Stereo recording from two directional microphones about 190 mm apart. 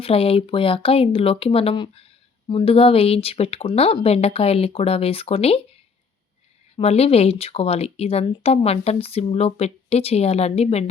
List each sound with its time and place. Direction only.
0.0 s speech: 30° left (ahead or behind)
6.7 s speech: 35° left (ahead or behind)